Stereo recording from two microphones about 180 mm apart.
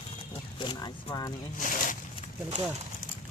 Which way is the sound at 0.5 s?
25° left (ahead or behind).